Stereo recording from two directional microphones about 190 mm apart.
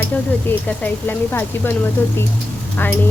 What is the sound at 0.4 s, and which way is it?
Speech, 10° left (ahead or behind).